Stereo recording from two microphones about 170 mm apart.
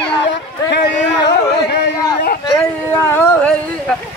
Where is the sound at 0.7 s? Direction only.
80° left.